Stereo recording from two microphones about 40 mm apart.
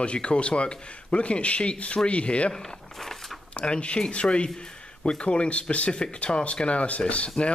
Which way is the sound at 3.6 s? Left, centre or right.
Left.